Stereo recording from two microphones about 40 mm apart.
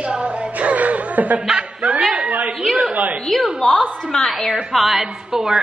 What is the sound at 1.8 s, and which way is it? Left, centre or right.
Speech, right.